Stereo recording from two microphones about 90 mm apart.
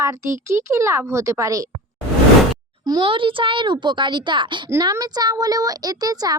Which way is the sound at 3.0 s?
75° right (ahead or behind).